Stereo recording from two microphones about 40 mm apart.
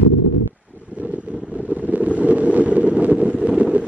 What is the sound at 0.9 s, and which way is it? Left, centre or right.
Vehicle, right.